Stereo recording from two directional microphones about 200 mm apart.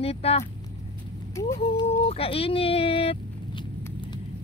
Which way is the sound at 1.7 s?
30° left (ahead or behind).